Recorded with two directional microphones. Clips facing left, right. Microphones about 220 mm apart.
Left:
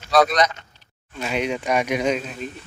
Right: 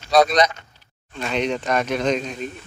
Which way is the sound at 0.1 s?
20° right (ahead or behind).